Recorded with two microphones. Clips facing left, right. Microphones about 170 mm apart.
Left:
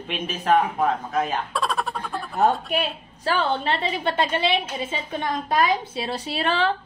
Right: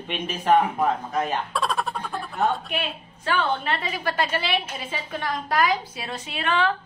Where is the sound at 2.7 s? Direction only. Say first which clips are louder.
Left 4 dB; 35° left (ahead or behind).